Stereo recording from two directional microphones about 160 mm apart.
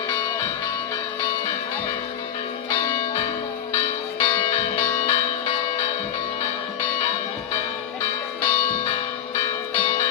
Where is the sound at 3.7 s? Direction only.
35° left (ahead or behind).